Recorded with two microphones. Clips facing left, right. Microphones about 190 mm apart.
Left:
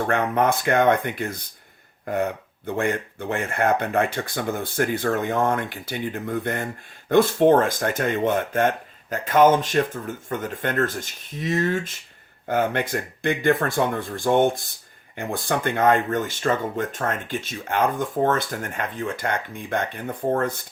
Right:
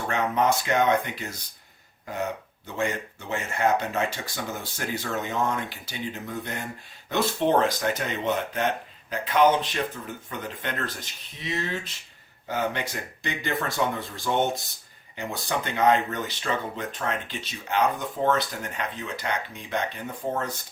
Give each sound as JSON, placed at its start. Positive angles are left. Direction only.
{"t": 0.1, "sound": "speech", "side_deg": 55}